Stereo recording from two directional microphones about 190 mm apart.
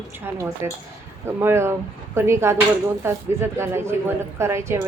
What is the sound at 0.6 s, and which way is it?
A woman's voice, 15° right (ahead or behind).